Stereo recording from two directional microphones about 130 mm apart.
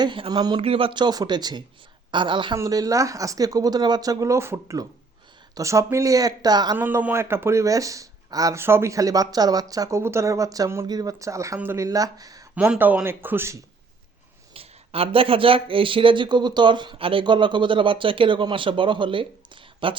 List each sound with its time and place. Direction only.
0.0 s speech: 35° right (ahead or behind)
2.6 s speech: 25° right (ahead or behind)
6.7 s speech: 15° right (ahead or behind)
12.5 s speech: 10° right (ahead or behind)
14.5 s speech: 45° right (ahead or behind)